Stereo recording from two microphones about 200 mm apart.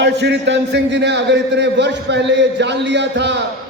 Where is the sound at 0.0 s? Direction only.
60° right (ahead or behind).